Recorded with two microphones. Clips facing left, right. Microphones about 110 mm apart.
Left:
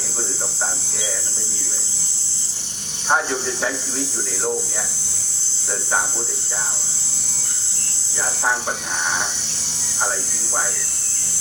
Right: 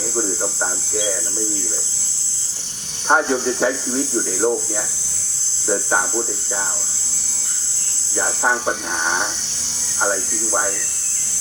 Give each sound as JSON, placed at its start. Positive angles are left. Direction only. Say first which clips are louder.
{"t": 3.1, "sound": "speech", "louder": "right 4 dB", "side_deg": -15}
{"t": 5.6, "sound": "speech", "louder": "right 5 dB", "side_deg": -20}
{"t": 8.4, "sound": "speech", "louder": "right 2 dB", "side_deg": -20}